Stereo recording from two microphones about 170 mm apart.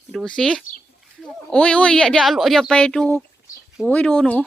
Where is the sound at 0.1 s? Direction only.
5° left (ahead or behind).